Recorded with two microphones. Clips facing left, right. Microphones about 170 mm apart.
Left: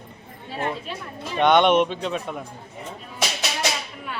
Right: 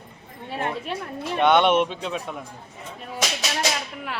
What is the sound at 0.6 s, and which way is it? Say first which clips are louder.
Speech: even; 60° right (ahead or behind).